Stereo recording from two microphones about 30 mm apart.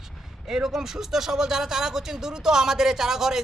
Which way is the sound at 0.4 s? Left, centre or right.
Centre.